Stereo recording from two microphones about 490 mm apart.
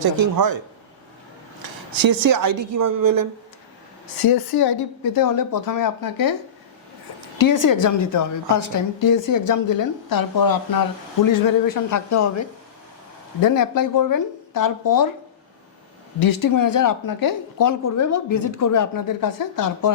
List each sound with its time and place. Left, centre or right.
0.0 s a man's voice: right
1.6 s a woman's voice: right
4.2 s a woman's voice: left
7.4 s a woman's voice: left
16.2 s a woman's voice: left